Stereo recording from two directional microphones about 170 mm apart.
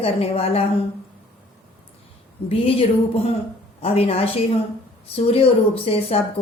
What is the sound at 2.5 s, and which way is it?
Speech, 35° left (ahead or behind).